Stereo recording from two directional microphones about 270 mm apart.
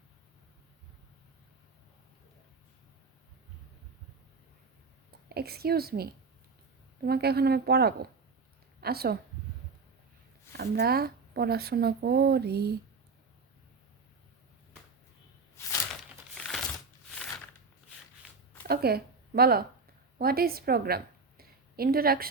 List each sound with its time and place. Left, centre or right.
5.3 s a woman's voice: right
10.6 s speech: right
15.6 s a sound: centre
16.3 s crumpling: centre
18.7 s a woman's voice: right